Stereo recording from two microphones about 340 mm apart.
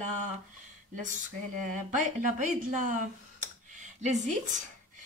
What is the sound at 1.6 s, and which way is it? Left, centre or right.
A woman's voice, right.